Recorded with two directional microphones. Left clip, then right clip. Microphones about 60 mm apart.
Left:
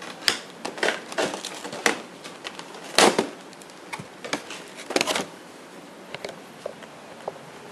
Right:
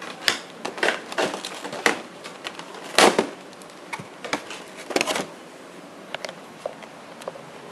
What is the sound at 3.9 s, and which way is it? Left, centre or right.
Typing, centre.